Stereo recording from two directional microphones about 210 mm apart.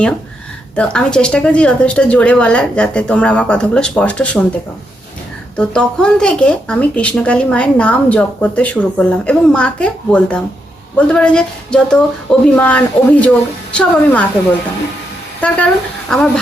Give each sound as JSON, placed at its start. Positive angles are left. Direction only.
{"t": 0.8, "sound": "speech", "side_deg": 5}
{"t": 5.5, "sound": "a woman's voice", "side_deg": 5}
{"t": 15.4, "sound": "speech", "side_deg": 5}